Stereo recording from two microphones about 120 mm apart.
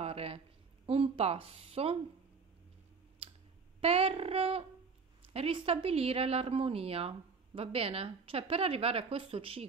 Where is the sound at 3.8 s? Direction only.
55° right (ahead or behind).